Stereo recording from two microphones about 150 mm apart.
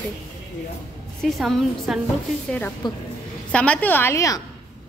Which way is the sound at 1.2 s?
Centre (ahead or behind).